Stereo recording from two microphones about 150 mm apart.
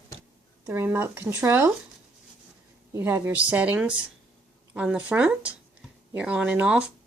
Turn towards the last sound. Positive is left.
turn(degrees=-5)  # may be behind; listen again after turning